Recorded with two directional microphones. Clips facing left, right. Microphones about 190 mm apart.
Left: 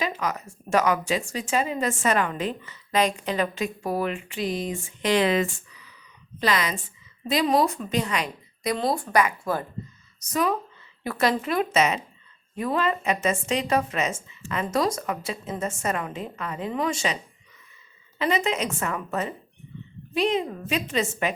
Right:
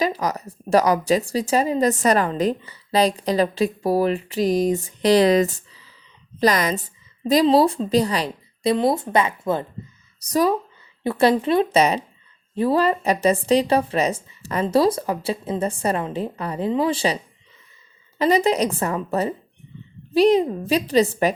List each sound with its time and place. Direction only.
0.0 s a woman's voice: 35° right (ahead or behind)
10.2 s speech: 35° right (ahead or behind)
18.2 s speech: 35° right (ahead or behind)